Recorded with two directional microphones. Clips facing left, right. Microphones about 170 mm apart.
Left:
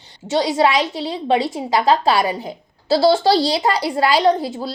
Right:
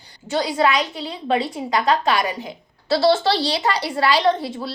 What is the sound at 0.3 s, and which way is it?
A woman's voice, 25° left (ahead or behind).